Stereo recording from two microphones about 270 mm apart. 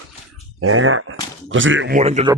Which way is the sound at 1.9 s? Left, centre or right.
Right.